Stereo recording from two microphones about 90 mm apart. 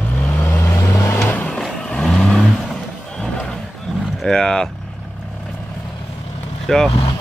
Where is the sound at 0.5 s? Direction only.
30° left (ahead or behind); by 3.3 s 5° left (ahead or behind).